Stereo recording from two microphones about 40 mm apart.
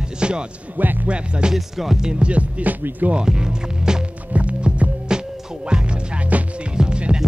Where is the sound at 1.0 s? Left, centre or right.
Right.